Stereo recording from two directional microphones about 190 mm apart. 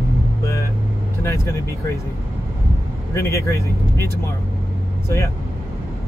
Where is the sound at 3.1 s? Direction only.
15° left (ahead or behind).